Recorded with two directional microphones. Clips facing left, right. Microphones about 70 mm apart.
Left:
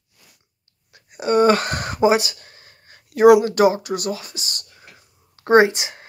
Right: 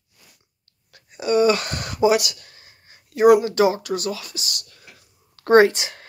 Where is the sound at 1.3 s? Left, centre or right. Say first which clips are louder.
Left 2 dB; left.